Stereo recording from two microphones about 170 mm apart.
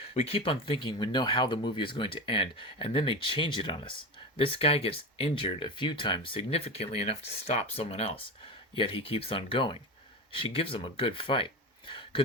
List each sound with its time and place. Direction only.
0.1 s speech: 35° left (ahead or behind)